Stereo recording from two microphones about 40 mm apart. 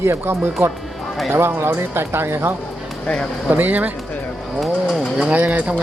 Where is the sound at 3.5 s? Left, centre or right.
Right.